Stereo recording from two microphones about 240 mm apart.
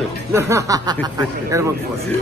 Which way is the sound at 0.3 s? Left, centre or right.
Centre.